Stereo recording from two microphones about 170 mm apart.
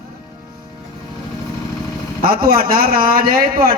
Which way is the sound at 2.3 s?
60° right (ahead or behind).